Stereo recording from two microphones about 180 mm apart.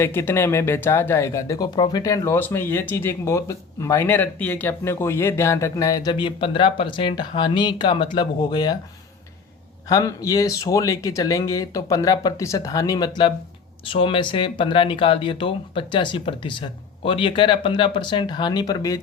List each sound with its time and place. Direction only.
0.0 s speech: 15° left (ahead or behind)
9.9 s speech: 20° left (ahead or behind)